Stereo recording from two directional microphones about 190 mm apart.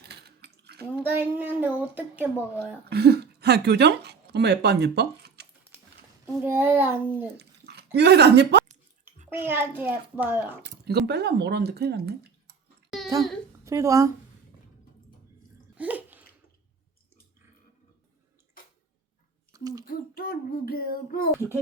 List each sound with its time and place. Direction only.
0.0 s a sound: 60° right (ahead or behind)
0.9 s speech: 10° right (ahead or behind)
2.9 s speech: 60° right (ahead or behind)
6.2 s speech: 10° right (ahead or behind)
7.3 s speech: 60° right (ahead or behind)
9.3 s speech: 10° right (ahead or behind)
10.6 s speech: 60° right (ahead or behind)
13.7 s speech: 15° right (ahead or behind)
15.8 s bathtub: 10° right (ahead or behind)
19.5 s speech: 20° right (ahead or behind)
19.8 s child singing: 50° left (ahead or behind)
21.3 s speech: 15° right (ahead or behind)